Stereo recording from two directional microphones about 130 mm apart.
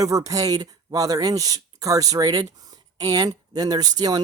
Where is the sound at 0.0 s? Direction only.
25° right (ahead or behind).